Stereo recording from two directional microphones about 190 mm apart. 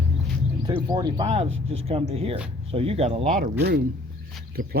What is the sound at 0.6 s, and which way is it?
Speech, 20° right (ahead or behind).